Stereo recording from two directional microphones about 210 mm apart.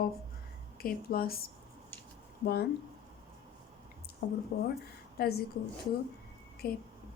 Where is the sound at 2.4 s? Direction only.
50° left (ahead or behind).